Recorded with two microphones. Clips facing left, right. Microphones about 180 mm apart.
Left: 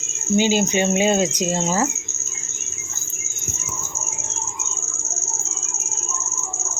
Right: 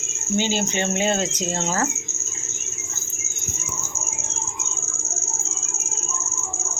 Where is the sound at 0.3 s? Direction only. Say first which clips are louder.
Left 5 dB; 15° left (ahead or behind).